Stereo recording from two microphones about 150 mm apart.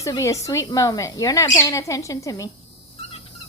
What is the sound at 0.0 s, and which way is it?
Speech, 20° left (ahead or behind).